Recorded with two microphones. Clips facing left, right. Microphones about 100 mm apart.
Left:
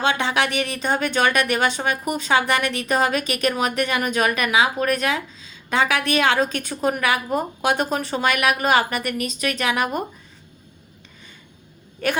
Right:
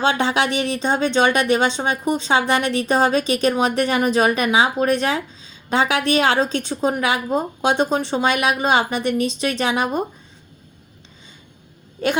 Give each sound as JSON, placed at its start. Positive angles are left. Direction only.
{"t": 0.0, "sound": "a woman's voice", "side_deg": -30}